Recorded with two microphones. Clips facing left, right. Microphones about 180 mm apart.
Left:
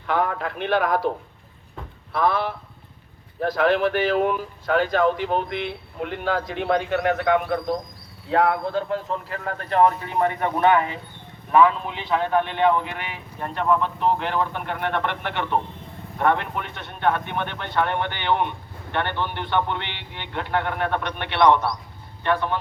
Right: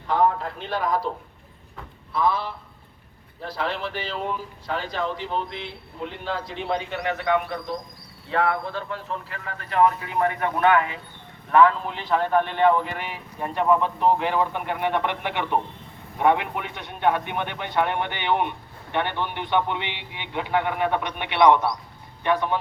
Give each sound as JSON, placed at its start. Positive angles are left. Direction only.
{"t": 0.1, "sound": "speech", "side_deg": 70}
{"t": 2.1, "sound": "speech", "side_deg": 65}
{"t": 8.3, "sound": "speech", "side_deg": 40}
{"t": 11.5, "sound": "a man's voice", "side_deg": 5}